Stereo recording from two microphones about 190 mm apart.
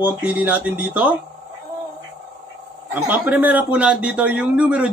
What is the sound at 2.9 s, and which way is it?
Speech, 10° right (ahead or behind).